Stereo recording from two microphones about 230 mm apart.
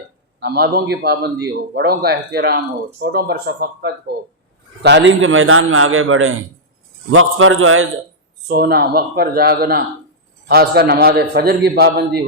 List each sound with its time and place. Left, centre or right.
0.3 s a man's voice: right
8.4 s a man's voice: right